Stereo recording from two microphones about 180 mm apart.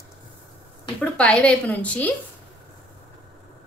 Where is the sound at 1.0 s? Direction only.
5° left (ahead or behind).